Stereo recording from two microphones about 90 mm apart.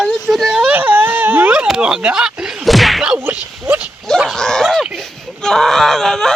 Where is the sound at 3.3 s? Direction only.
20° right (ahead or behind).